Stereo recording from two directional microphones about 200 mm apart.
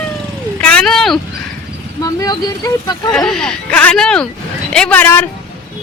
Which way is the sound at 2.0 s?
20° left (ahead or behind).